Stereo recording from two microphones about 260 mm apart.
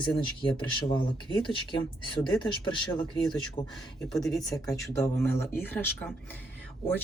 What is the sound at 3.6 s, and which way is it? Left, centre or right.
Speech, centre.